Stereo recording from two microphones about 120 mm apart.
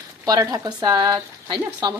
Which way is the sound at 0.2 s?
30° right (ahead or behind).